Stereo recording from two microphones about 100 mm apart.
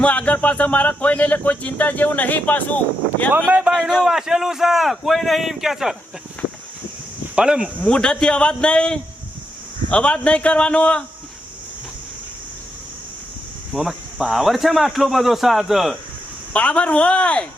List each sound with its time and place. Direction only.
0.0 s speech: 15° left (ahead or behind)
3.3 s speech: 15° right (ahead or behind)
3.7 s speech: 5° left (ahead or behind)
7.3 s speech: 10° right (ahead or behind)
7.8 s speech: 10° left (ahead or behind)
13.7 s speech: centre (ahead or behind)
16.5 s speech: 10° left (ahead or behind)